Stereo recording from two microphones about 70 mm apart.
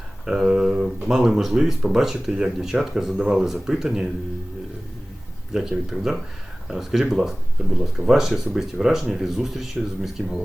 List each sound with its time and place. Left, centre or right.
0.3 s speech: centre
5.5 s speech: centre